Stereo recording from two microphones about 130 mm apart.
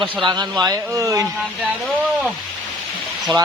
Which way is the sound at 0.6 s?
25° right (ahead or behind).